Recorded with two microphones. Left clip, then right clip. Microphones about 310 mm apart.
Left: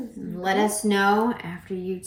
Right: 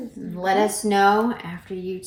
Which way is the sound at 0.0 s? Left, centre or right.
Centre.